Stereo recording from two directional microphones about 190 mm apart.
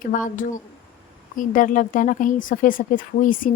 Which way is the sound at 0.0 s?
45° left (ahead or behind).